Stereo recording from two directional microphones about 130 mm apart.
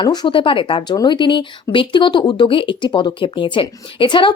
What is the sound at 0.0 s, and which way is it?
Speech, 35° left (ahead or behind).